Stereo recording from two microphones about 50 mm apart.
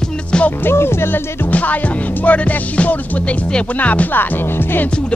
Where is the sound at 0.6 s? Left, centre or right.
Left.